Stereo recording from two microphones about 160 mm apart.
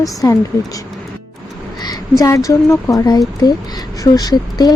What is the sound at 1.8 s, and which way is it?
Speech, 20° left (ahead or behind).